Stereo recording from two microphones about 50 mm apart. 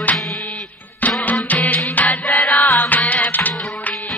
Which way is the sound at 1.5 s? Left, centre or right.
Left.